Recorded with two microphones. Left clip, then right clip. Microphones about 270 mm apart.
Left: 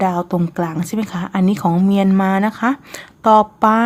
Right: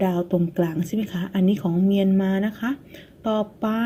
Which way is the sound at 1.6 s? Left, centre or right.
Left.